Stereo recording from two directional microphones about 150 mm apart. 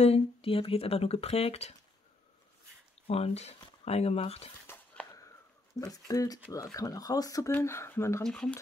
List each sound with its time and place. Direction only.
0.0 s speech: 40° left (ahead or behind)
3.1 s speech: 45° left (ahead or behind)
4.7 s a sound: 15° left (ahead or behind)
5.8 s speech: 25° left (ahead or behind)
8.2 s speech: 5° left (ahead or behind)